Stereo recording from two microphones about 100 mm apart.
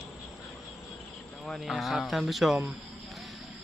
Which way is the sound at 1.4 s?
Centre (ahead or behind).